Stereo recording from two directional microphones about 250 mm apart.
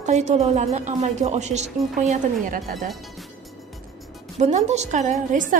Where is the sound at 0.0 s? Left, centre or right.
Right.